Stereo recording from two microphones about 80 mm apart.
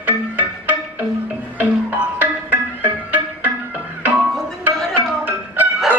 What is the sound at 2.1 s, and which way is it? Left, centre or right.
Music, right.